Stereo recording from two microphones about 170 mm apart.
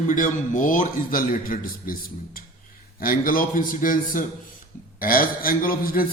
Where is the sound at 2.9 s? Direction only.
60° left (ahead or behind).